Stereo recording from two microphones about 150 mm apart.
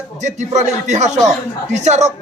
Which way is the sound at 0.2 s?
50° right (ahead or behind).